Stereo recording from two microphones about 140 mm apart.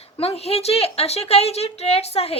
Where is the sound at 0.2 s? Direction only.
45° left (ahead or behind).